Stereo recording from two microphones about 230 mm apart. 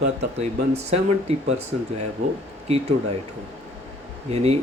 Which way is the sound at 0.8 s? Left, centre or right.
Right.